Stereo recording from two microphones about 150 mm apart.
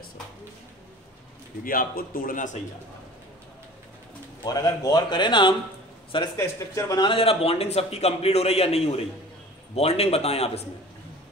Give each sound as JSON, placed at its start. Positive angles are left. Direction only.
{"t": 1.6, "sound": "speech", "side_deg": 70}
{"t": 4.5, "sound": "speech", "side_deg": 25}
{"t": 6.3, "sound": "speech", "side_deg": 20}
{"t": 7.1, "sound": "a man's voice", "side_deg": 40}